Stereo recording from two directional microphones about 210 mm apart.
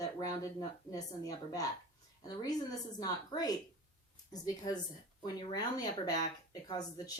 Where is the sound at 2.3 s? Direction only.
15° left (ahead or behind).